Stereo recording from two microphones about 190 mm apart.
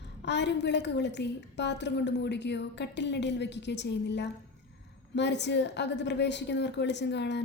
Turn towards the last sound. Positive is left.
turn(degrees=65)  # may be behind; listen again after turning